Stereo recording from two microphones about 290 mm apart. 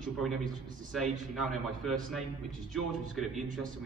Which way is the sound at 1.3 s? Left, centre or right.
Centre.